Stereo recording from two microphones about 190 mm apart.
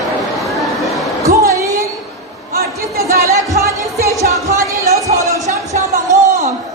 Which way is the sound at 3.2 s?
15° right (ahead or behind).